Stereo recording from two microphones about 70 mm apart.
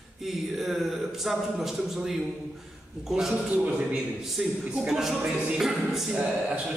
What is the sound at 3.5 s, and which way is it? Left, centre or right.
A man's voice, centre.